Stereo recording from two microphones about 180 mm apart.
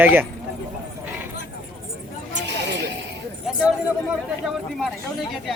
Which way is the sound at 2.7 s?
80° right.